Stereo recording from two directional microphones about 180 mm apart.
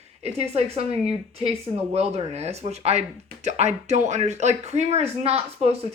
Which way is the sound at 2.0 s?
35° right (ahead or behind).